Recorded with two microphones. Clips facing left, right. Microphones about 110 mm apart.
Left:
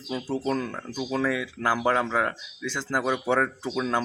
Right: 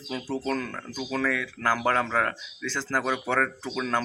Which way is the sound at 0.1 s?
20° left (ahead or behind).